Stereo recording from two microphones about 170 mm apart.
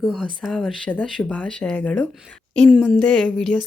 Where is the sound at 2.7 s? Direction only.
5° right (ahead or behind).